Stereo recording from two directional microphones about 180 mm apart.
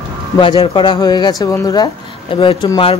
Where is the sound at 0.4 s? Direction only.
30° left (ahead or behind).